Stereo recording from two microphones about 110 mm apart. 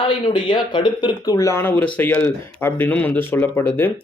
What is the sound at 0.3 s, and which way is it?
Speech, 45° left (ahead or behind).